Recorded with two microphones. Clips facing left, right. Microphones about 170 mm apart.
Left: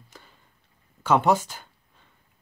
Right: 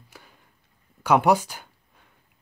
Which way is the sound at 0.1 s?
10° right (ahead or behind).